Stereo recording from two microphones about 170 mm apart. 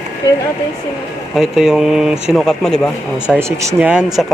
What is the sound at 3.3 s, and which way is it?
Speech, 15° right (ahead or behind).